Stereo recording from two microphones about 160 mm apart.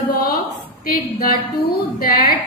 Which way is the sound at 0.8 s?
65° left (ahead or behind).